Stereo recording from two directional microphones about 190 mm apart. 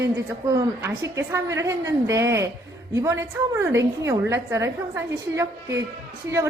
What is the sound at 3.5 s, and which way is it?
A woman's voice, 15° right (ahead or behind).